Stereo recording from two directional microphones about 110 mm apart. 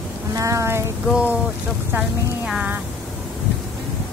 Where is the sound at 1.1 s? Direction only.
10° right (ahead or behind).